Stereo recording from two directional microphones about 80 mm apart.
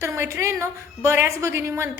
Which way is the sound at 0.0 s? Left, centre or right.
Right.